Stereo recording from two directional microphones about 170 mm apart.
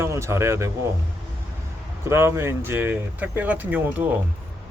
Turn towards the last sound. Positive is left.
turn(degrees=-10)  # may be behind; listen again after turning